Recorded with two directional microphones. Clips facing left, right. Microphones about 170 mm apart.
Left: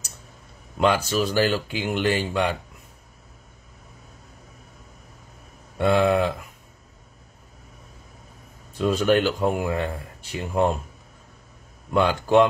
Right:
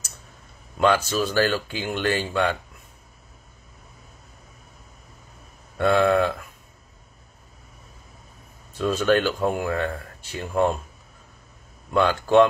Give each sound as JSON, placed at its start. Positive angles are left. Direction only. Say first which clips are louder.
{"t": 0.7, "sound": "speech", "louder": "even", "side_deg": 15}
{"t": 5.8, "sound": "speech", "louder": "even", "side_deg": 15}
{"t": 8.7, "sound": "speech", "louder": "left 1 dB", "side_deg": 15}
{"t": 11.9, "sound": "speech", "louder": "even", "side_deg": 15}